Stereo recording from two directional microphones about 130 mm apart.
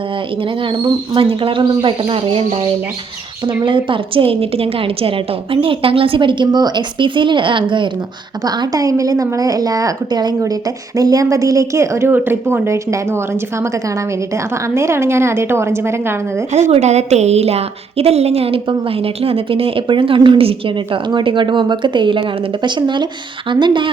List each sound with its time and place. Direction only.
0.6 s a woman's voice: 40° right (ahead or behind); by 16.1 s 20° right (ahead or behind)
16.5 s a woman's voice: 60° right (ahead or behind); by 23.9 s 35° right (ahead or behind)